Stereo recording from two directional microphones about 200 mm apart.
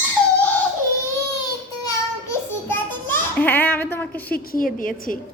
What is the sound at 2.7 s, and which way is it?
Children playing, 10° left (ahead or behind).